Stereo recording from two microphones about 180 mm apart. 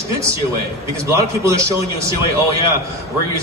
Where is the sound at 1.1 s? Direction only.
15° right (ahead or behind).